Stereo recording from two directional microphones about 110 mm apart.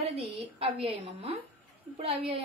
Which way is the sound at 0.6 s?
55° right (ahead or behind).